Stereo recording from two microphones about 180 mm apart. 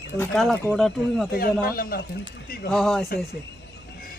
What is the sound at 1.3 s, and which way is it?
Speech, 55° left (ahead or behind).